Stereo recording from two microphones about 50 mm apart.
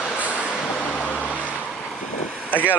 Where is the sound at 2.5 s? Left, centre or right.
Left.